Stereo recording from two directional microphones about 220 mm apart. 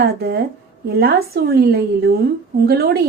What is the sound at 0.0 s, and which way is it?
A woman's voice, 45° right (ahead or behind).